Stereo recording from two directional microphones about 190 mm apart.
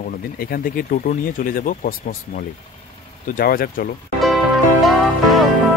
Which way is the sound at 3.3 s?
50° left (ahead or behind).